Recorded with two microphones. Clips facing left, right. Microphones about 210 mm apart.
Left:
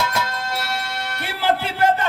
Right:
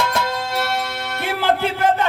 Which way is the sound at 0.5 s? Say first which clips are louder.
Right 4 dB; 55° right (ahead or behind).